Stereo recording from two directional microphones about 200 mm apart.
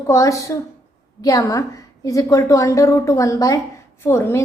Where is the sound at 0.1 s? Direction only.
15° left (ahead or behind).